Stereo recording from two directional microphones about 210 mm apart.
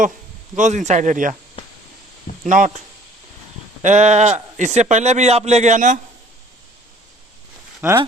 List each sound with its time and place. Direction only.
0.5 s a man's voice: 35° right (ahead or behind)
2.4 s a man's voice: 40° right (ahead or behind)
3.8 s a man's voice: 35° right (ahead or behind)
7.8 s speech: 10° right (ahead or behind)